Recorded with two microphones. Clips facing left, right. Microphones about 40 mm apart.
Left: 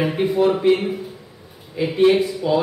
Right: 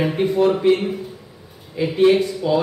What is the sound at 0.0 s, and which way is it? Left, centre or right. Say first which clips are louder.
Speech: right 1 dB; centre.